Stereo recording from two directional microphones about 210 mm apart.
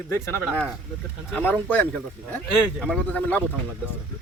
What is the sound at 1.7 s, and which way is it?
Speech, 5° left (ahead or behind).